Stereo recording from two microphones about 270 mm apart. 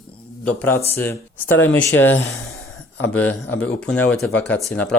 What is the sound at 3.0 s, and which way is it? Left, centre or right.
Speech, centre.